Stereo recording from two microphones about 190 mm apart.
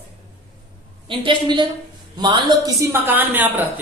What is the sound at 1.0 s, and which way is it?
A woman's voice, 25° right (ahead or behind).